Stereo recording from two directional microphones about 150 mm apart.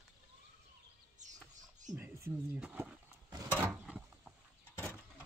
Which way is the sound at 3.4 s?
15° right (ahead or behind).